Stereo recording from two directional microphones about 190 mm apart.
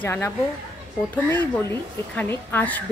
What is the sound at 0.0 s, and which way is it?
Speech, 10° left (ahead or behind).